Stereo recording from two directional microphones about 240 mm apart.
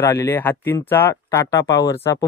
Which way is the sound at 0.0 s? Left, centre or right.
Centre.